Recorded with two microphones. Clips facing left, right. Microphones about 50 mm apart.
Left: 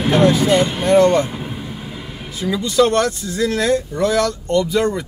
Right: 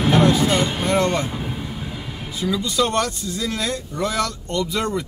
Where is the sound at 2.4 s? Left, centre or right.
Left.